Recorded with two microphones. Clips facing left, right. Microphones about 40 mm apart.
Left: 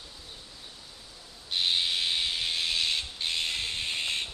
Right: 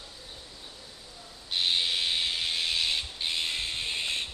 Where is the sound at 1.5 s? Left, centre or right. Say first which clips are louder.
Even; centre.